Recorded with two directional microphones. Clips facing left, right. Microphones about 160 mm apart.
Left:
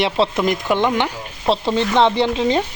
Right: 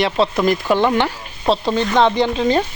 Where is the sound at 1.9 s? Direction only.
25° left (ahead or behind).